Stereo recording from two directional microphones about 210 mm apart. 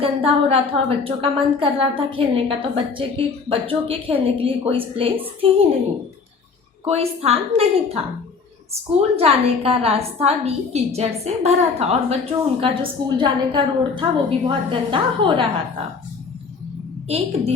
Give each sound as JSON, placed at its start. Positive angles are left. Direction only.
{"t": 0.0, "sound": "a woman's voice", "side_deg": -25}
{"t": 6.8, "sound": "a woman's voice", "side_deg": -30}
{"t": 9.0, "sound": "a woman's voice", "side_deg": -30}
{"t": 17.1, "sound": "a woman's voice", "side_deg": -30}